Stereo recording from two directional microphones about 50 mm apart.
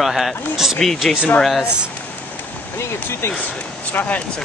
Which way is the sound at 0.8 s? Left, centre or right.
Centre.